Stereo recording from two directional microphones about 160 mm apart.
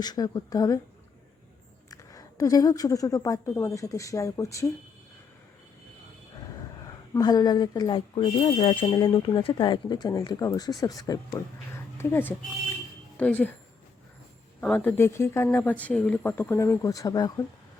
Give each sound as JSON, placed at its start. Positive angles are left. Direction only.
{"t": 0.0, "sound": "speech", "side_deg": 25}
{"t": 1.9, "sound": "speech", "side_deg": 20}
{"t": 7.1, "sound": "speech", "side_deg": 25}
{"t": 14.6, "sound": "speech", "side_deg": 5}